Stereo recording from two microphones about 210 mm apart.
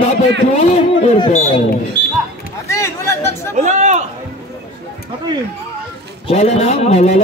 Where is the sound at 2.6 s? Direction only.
15° left (ahead or behind).